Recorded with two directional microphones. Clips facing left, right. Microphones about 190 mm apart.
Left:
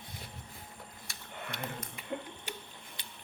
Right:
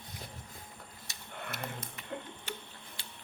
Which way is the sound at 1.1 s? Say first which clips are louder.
Left 1 dB; 20° right (ahead or behind).